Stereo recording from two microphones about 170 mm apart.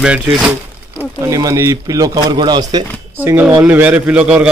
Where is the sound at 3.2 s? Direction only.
10° right (ahead or behind).